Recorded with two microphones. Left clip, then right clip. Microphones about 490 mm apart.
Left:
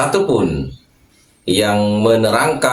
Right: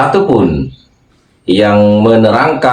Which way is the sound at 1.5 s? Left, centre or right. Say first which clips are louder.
Right 8 dB; left.